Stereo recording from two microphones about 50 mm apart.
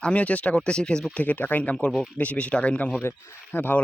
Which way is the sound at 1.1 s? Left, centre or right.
Left.